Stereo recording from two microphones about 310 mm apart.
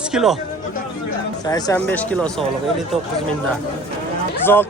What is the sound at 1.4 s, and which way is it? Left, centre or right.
Speech, centre.